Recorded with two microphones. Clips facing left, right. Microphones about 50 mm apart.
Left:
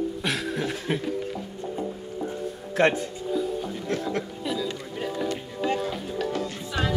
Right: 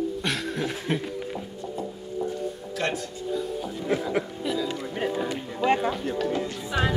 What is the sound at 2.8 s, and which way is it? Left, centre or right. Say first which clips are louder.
Speech: left 7 dB; left.